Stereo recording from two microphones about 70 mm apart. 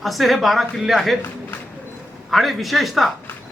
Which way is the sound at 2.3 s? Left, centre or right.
Centre.